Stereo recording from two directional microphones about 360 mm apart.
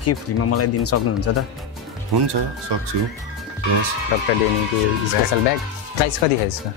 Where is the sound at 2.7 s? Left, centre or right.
Right.